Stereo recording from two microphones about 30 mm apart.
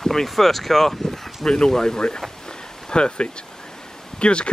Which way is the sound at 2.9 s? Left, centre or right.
Left.